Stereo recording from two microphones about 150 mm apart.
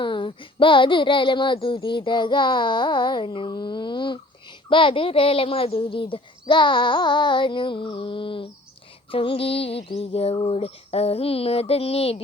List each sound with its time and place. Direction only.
0.0 s speech: 30° left (ahead or behind)